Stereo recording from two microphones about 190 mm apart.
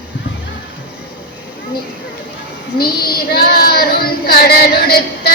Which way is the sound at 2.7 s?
55° left (ahead or behind).